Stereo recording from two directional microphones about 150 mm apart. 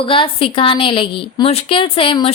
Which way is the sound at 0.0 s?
35° left (ahead or behind).